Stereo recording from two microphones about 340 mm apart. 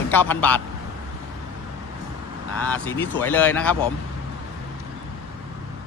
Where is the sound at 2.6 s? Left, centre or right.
Centre.